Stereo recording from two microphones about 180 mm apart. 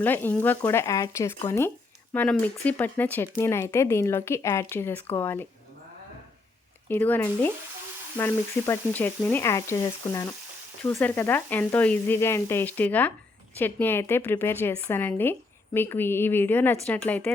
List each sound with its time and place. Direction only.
0.0 s speech: 10° left (ahead or behind)
6.8 s speech: 10° left (ahead or behind)